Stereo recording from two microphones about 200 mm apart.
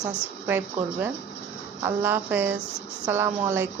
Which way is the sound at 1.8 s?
10° right (ahead or behind).